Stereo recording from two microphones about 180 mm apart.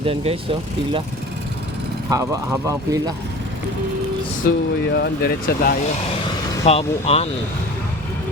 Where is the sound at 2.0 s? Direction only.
20° right (ahead or behind).